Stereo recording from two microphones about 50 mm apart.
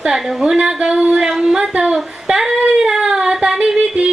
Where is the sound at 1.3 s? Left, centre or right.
Centre.